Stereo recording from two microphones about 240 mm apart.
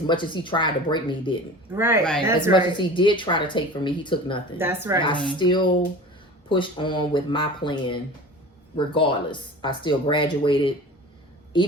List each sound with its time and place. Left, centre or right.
0.1 s speech: centre
1.7 s a woman's voice: centre
2.5 s speech: centre
4.5 s a woman's voice: centre
5.0 s speech: centre